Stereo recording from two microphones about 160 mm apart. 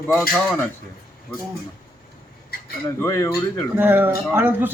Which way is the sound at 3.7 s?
10° right (ahead or behind).